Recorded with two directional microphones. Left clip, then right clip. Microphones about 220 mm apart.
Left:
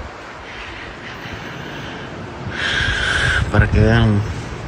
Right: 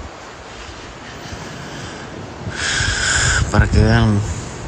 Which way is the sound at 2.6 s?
5° right (ahead or behind).